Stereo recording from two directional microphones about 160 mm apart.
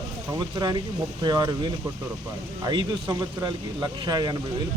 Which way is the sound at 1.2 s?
25° right (ahead or behind).